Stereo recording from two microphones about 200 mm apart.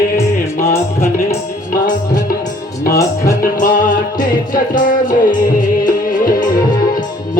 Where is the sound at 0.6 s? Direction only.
45° left (ahead or behind).